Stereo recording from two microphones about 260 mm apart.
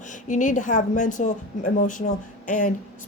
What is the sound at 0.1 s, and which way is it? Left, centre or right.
Speech, left.